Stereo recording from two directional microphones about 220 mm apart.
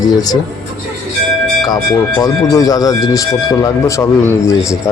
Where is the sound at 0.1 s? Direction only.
15° left (ahead or behind).